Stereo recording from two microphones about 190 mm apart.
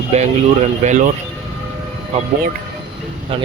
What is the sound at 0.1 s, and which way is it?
Speech, 35° right (ahead or behind).